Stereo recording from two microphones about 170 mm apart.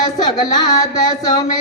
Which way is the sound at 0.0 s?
25° left (ahead or behind).